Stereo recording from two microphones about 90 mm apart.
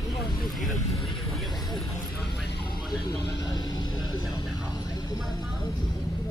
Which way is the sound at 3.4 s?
50° left (ahead or behind).